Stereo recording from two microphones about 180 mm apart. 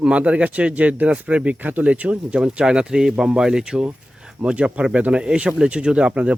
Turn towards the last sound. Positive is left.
turn(degrees=-5)  # may be behind; listen again after turning